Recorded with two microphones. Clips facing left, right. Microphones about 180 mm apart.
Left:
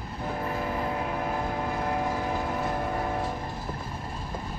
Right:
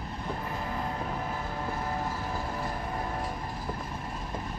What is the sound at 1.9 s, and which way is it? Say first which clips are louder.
Vehicle: left 5 dB; 60° left (ahead or behind).